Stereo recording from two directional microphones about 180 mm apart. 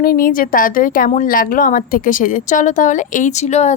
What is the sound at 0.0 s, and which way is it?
A woman's voice, 50° left (ahead or behind).